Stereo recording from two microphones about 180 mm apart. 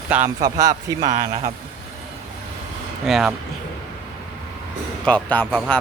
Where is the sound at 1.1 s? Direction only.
40° right (ahead or behind).